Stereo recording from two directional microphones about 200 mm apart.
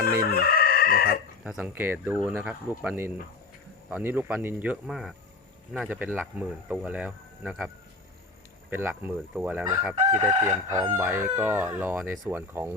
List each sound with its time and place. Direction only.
0.0 s chicken: 50° left (ahead or behind)
1.5 s crowing: 5° right (ahead or behind)
8.7 s crowing: 10° right (ahead or behind)